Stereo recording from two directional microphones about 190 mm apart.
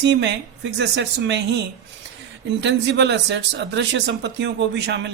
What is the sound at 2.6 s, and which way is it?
Speech, 65° right (ahead or behind).